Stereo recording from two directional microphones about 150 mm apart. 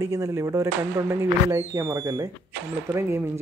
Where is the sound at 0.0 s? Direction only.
20° right (ahead or behind).